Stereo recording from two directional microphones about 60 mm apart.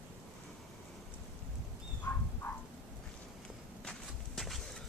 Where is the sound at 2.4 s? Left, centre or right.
Left.